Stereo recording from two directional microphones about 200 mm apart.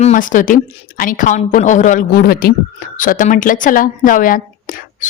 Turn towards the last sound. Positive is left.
turn(degrees=40)  # may be behind; listen again after turning